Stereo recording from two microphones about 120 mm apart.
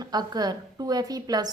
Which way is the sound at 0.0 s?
35° right (ahead or behind).